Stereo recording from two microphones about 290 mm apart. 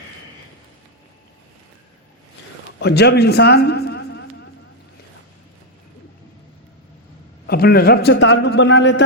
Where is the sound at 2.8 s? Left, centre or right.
Left.